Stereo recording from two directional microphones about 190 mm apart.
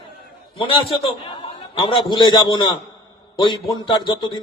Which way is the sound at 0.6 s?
30° left (ahead or behind).